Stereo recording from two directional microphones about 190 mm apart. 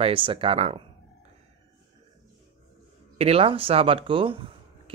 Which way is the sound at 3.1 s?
30° right (ahead or behind).